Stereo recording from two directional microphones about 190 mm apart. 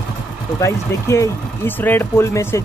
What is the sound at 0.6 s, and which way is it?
Speech, 15° left (ahead or behind).